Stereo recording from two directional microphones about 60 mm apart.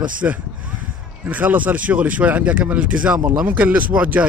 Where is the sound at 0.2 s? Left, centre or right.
Right.